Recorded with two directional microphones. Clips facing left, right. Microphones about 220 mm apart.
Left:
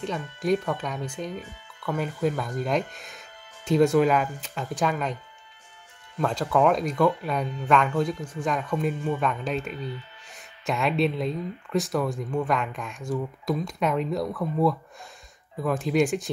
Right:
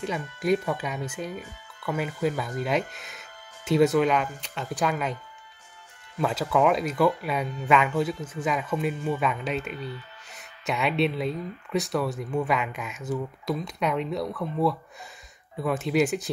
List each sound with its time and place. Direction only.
0.0 s speech: 5° right (ahead or behind)